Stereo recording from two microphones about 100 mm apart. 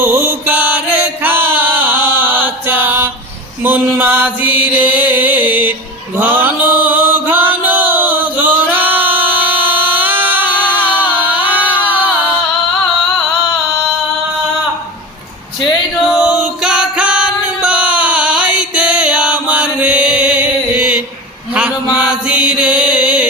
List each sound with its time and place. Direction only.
0.0 s chant: 25° right (ahead or behind)
9.4 s a sound: 20° right (ahead or behind)
10.7 s music: 15° right (ahead or behind)
16.0 s music: 10° right (ahead or behind)
21.5 s chant: 10° right (ahead or behind)